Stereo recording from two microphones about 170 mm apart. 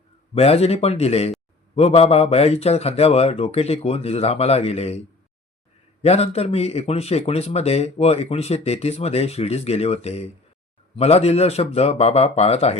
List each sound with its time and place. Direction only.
0.3 s a man's voice: 35° left (ahead or behind)